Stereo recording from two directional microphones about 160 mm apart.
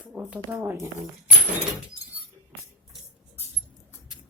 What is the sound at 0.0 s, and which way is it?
Speech, 5° right (ahead or behind).